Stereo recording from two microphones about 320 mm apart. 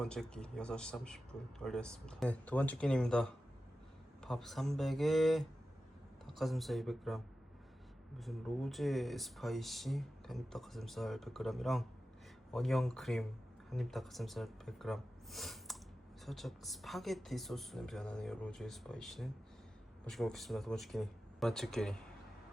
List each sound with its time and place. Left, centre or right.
0.0 s speech: centre
8.2 s speech: centre